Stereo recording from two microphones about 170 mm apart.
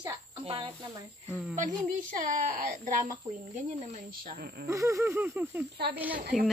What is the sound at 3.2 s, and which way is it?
Speech, 20° right (ahead or behind).